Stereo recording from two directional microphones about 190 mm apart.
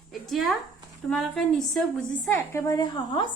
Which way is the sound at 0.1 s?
Centre (ahead or behind).